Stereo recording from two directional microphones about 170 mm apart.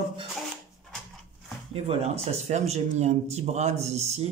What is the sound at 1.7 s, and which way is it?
Speech, 35° right (ahead or behind).